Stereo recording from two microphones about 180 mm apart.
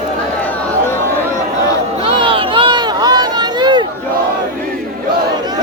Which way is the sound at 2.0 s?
30° right (ahead or behind).